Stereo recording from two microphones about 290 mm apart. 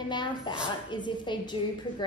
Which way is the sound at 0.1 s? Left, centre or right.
Centre.